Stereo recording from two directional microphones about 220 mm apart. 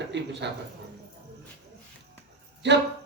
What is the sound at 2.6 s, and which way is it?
Speech, 50° right (ahead or behind).